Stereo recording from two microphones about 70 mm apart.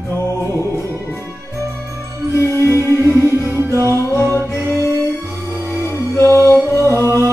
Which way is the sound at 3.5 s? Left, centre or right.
Right.